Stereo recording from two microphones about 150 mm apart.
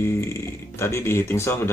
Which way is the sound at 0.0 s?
15° left (ahead or behind).